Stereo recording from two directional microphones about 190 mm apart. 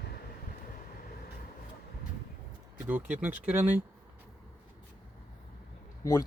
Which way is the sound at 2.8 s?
10° right (ahead or behind).